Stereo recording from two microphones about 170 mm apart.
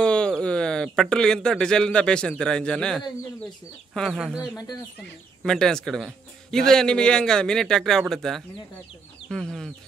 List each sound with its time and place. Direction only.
0.0 s a man's voice: 5° left (ahead or behind)
5.4 s a man's voice: 5° left (ahead or behind)